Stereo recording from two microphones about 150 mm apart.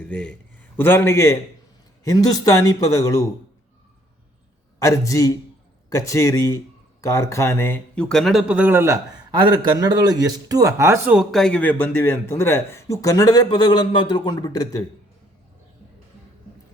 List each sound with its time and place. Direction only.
0.0 s a man's voice: 10° left (ahead or behind)
4.8 s speech: 20° left (ahead or behind); by 9.0 s 15° right (ahead or behind)
9.3 s a man's voice: 30° right (ahead or behind); by 14.8 s 25° left (ahead or behind)